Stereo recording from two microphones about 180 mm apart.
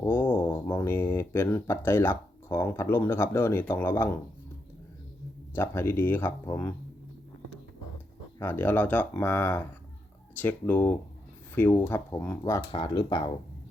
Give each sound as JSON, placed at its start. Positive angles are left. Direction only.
{"t": 0.0, "sound": "a sound", "side_deg": 10}
{"t": 0.3, "sound": "speech", "side_deg": 10}
{"t": 5.5, "sound": "speech", "side_deg": 15}
{"t": 8.4, "sound": "speech", "side_deg": 10}